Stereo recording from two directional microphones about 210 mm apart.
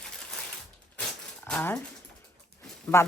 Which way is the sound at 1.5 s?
5° left (ahead or behind).